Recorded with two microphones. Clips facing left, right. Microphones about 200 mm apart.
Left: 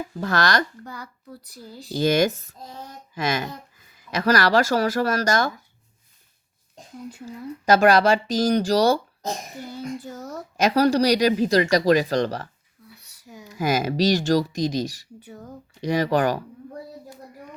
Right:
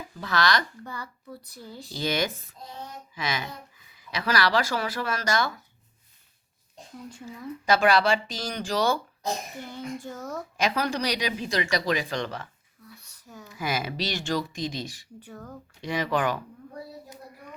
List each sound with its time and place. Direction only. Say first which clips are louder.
0.2 s speech: left 3 dB; 45° left (ahead or behind)
0.9 s a child's voice: left 1 dB; 10° left (ahead or behind)
2.0 s speech: left 8 dB; 45° left (ahead or behind)
7.6 s speech: left 5 dB; 45° left (ahead or behind)
9.2 s a child's voice: left 1 dB; 10° left (ahead or behind)
10.6 s speech: left 9 dB; 40° left (ahead or behind)
13.1 s a sound: left 4 dB; 10° left (ahead or behind)
13.5 s speech: left 7 dB; 45° left (ahead or behind)
15.2 s a child's voice: left 2 dB; 10° left (ahead or behind)
15.8 s speech: left 6 dB; 40° left (ahead or behind)